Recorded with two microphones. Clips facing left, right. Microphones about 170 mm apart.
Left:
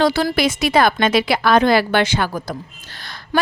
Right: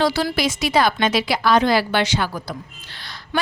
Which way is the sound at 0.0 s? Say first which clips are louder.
Left 3 dB; 55° left (ahead or behind).